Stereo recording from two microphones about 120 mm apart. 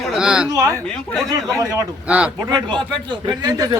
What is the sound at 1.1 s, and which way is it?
Speech, centre (ahead or behind).